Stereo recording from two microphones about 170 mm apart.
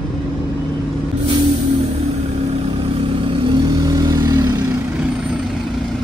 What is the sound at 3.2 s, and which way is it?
Vehicle, 30° right (ahead or behind).